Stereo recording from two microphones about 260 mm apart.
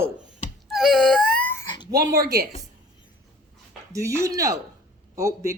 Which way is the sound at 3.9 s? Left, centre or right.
Centre.